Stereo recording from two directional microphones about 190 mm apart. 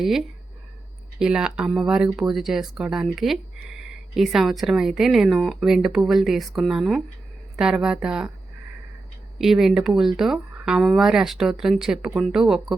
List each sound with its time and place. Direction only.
0.0 s speech: centre (ahead or behind)
9.4 s speech: centre (ahead or behind)